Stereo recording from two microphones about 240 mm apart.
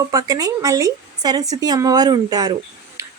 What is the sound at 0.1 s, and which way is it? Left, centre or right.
A woman's voice, centre.